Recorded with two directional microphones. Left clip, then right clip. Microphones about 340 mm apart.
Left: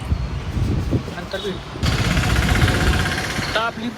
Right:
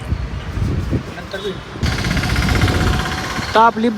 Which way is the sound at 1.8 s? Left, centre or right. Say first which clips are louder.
Right 1 dB; right.